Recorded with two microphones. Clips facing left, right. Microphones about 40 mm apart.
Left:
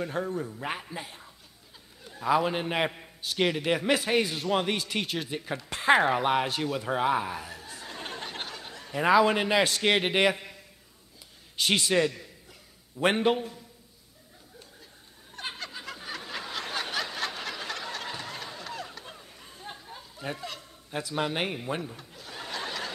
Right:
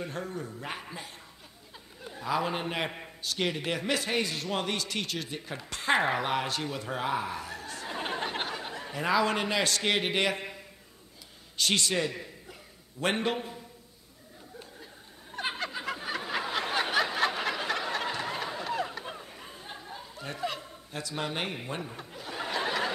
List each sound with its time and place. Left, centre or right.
0.1 s a man's voice: centre
2.2 s a man's voice: centre
7.8 s a sound: centre
8.9 s a man's voice: centre
10.3 s a sound: centre
11.5 s a man's voice: centre
12.1 s a sound: centre
13.0 s a man's voice: centre
15.3 s snicker: centre
19.6 s a sound: centre
20.3 s speech: centre
21.1 s a man's voice: centre
21.8 s snicker: centre